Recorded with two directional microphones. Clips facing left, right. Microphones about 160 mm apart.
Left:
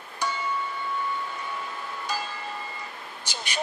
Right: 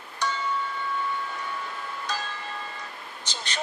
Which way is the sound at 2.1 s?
10° left (ahead or behind).